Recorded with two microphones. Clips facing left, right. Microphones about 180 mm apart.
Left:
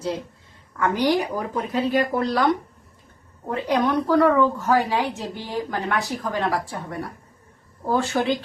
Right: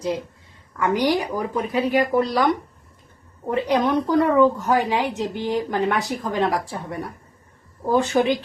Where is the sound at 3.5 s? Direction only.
20° right (ahead or behind).